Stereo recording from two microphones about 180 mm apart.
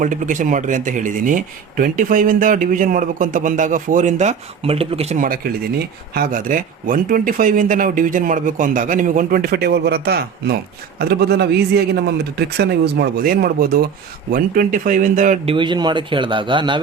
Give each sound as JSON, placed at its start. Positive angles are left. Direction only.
{"t": 0.0, "sound": "speech", "side_deg": -45}
{"t": 5.1, "sound": "a man's voice", "side_deg": -50}
{"t": 15.5, "sound": "speech", "side_deg": -25}